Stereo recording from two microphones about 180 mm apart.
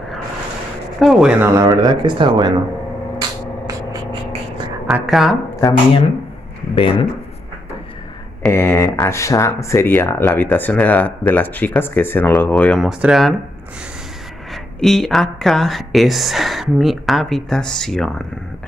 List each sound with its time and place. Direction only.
0.9 s speech: centre (ahead or behind)
1.4 s speech: 15° right (ahead or behind)
3.2 s music: 20° right (ahead or behind)
4.8 s speech: centre (ahead or behind)
6.7 s speech: 30° left (ahead or behind)
8.4 s speech: 10° left (ahead or behind)
14.5 s speech: centre (ahead or behind)